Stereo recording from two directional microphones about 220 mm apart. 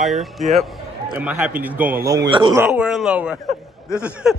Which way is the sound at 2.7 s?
5° right (ahead or behind).